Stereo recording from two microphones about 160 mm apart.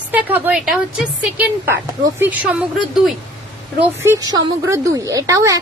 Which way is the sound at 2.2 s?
10° right (ahead or behind).